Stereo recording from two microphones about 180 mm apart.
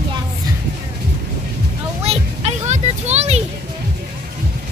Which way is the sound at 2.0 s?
35° right (ahead or behind).